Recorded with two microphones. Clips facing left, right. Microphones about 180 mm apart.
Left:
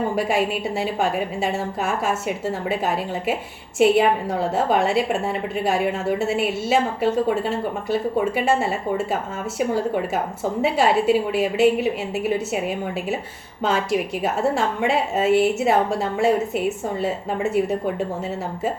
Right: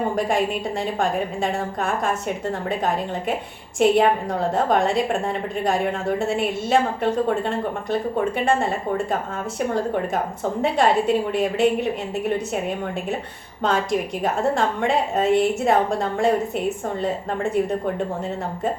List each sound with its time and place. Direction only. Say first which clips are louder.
0.2 s a woman's voice: even; 5° left (ahead or behind)